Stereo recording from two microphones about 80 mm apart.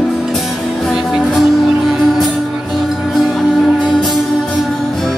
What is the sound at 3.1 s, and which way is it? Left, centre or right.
Music, centre.